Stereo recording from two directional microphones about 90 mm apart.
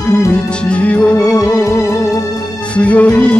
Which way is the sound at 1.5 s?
30° left (ahead or behind).